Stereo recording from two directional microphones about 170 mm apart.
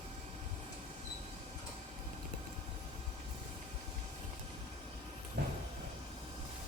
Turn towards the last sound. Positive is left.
turn(degrees=-65)  # may be behind; listen again after turning